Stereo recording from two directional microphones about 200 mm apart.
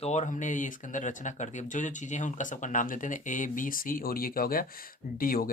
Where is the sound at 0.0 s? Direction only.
35° left (ahead or behind).